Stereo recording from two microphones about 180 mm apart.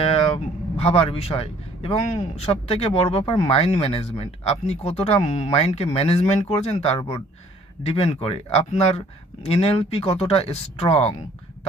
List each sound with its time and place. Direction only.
0.0 s speech: 35° left (ahead or behind)